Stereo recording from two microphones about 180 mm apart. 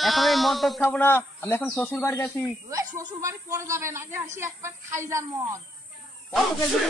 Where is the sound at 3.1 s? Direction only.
15° right (ahead or behind).